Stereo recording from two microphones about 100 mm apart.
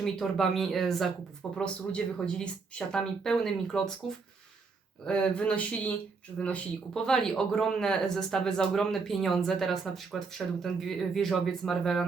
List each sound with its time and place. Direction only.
0.0 s speech: 5° left (ahead or behind)
5.0 s speech: 10° left (ahead or behind)